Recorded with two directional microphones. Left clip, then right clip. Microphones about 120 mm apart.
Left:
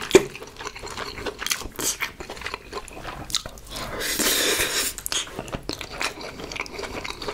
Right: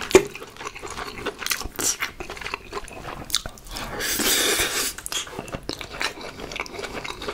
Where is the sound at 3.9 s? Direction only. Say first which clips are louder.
Right 1 dB; 30° right (ahead or behind).